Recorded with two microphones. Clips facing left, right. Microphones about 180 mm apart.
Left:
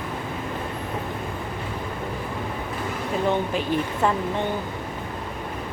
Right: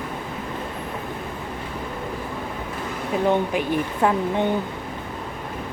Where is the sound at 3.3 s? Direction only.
15° right (ahead or behind).